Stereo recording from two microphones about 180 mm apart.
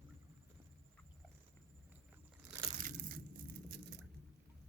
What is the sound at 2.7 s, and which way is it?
Crushing, 45° right (ahead or behind).